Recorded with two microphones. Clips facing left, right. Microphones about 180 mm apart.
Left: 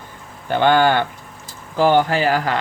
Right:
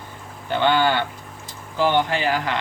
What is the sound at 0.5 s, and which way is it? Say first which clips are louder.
Speech: left 4 dB; 50° left (ahead or behind).